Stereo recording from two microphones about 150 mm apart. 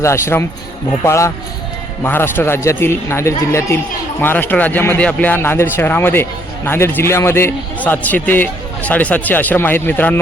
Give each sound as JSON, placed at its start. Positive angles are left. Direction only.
{"t": 0.0, "sound": "a man's voice", "side_deg": 20}